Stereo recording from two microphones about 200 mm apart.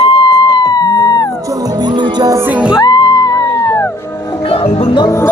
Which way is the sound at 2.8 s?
20° left (ahead or behind).